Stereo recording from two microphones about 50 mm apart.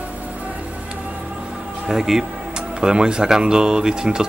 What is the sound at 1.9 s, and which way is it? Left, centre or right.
Speech, centre.